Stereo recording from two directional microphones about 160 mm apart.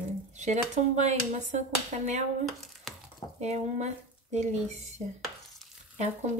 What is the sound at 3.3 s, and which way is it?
Speech, 45° right (ahead or behind).